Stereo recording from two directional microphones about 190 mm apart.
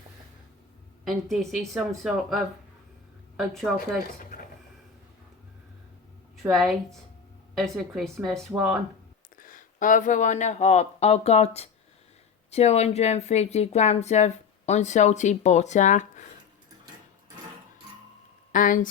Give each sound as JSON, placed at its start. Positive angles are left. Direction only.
{"t": 1.0, "sound": "speech", "side_deg": 0}
{"t": 6.5, "sound": "speech", "side_deg": 0}
{"t": 9.4, "sound": "speech", "side_deg": 45}
{"t": 18.5, "sound": "speech", "side_deg": 45}